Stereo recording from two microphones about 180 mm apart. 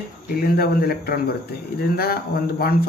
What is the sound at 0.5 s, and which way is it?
A man's voice, 60° left (ahead or behind).